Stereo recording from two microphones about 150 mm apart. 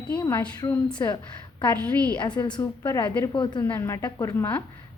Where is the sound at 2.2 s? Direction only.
30° left (ahead or behind).